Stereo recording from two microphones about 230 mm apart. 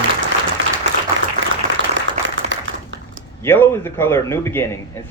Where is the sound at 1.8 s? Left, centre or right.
Right.